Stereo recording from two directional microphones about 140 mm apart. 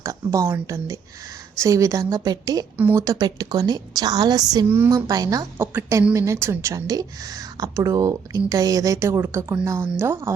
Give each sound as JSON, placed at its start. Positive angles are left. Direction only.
{"t": 0.0, "sound": "a woman's voice", "side_deg": -20}
{"t": 2.7, "sound": "speech", "side_deg": -10}
{"t": 3.0, "sound": "a woman's voice", "side_deg": -25}